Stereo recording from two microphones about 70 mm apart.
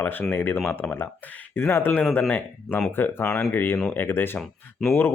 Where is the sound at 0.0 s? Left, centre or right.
Left.